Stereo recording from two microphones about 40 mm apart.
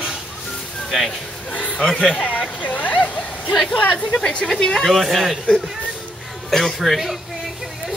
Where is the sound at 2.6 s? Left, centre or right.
Left.